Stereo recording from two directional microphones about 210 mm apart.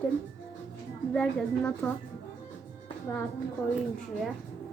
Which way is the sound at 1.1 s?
5° left (ahead or behind).